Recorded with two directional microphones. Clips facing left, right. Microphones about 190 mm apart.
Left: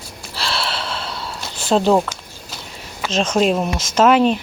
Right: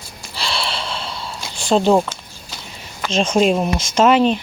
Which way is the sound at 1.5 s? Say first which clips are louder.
Right 1 dB; 5° left (ahead or behind).